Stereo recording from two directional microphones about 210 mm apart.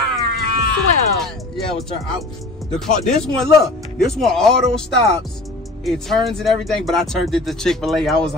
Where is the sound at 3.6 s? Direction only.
Centre (ahead or behind).